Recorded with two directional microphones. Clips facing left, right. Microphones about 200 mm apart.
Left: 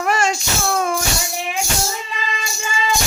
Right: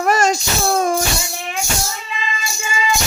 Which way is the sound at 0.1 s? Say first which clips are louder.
Right 4 dB; 40° right (ahead or behind).